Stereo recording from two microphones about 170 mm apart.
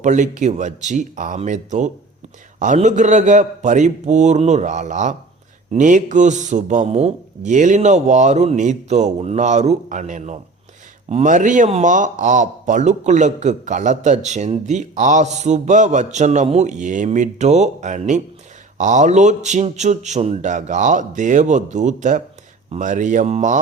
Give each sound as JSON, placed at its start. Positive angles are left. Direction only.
{"t": 0.0, "sound": "a man's voice", "side_deg": -45}